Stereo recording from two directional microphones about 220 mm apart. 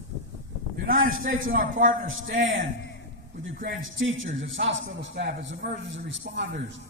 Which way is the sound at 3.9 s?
60° right (ahead or behind).